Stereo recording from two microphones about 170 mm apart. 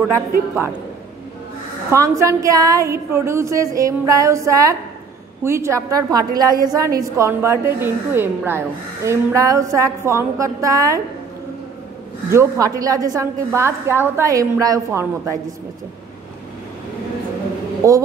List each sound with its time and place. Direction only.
1.9 s a woman's voice: 20° right (ahead or behind)
12.3 s a woman's voice: 15° right (ahead or behind)
17.8 s a woman's voice: 20° right (ahead or behind)